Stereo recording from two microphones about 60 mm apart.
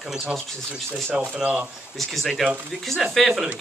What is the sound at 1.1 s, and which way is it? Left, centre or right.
Speech, right.